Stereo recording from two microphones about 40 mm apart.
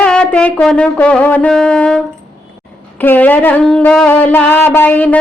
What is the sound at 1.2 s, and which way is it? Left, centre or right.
Music, left.